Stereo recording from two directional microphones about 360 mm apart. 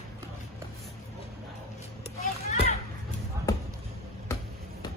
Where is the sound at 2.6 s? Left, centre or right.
Centre.